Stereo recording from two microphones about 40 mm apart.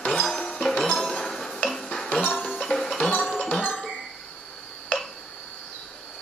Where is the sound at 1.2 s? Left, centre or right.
Centre.